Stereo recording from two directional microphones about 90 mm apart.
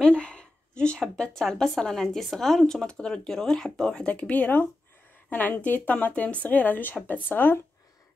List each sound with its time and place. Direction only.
0.0 s a woman's voice: 10° left (ahead or behind)